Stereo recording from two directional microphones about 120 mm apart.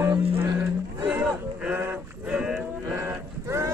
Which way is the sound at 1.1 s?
10° right (ahead or behind).